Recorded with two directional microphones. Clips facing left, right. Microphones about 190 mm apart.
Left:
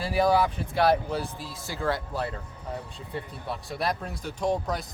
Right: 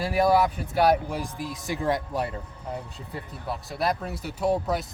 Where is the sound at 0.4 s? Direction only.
10° right (ahead or behind).